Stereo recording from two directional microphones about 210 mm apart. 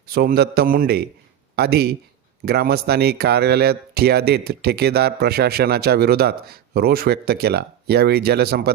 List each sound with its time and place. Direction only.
0.1 s speech: 45° right (ahead or behind)